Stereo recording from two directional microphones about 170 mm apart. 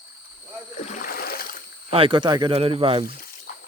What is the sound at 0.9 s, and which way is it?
Splash, 55° left (ahead or behind).